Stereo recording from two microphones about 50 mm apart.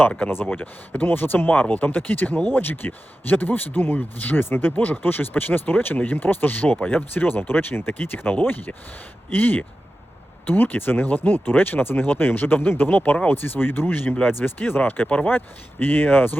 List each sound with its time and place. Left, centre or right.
0.4 s speech: left
15.0 s speech: left
15.3 s speech: left